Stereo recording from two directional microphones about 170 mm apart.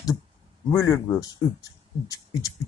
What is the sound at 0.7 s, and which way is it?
Speech, 15° left (ahead or behind).